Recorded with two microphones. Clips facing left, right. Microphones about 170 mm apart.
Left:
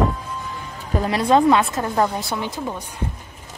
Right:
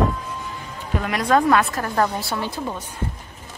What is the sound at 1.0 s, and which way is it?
A woman's voice, 30° left (ahead or behind).